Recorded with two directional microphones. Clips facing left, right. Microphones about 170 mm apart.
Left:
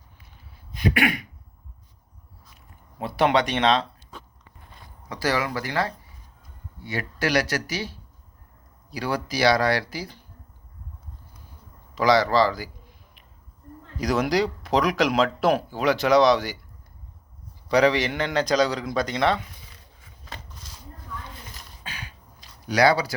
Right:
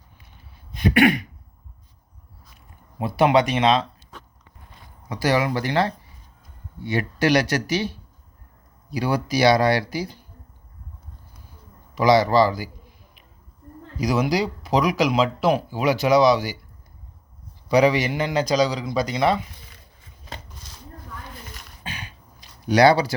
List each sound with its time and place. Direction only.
0.8 s speech: 25° right (ahead or behind)
3.0 s speech: 15° right (ahead or behind)
5.0 s speech: 15° right (ahead or behind)
11.9 s speech: 15° right (ahead or behind)
14.0 s a man's voice: 5° right (ahead or behind)
17.7 s a man's voice: 10° right (ahead or behind)
21.8 s a sound: 20° right (ahead or behind)